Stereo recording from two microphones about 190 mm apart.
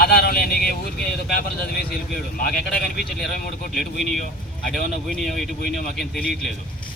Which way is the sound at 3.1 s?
Centre (ahead or behind).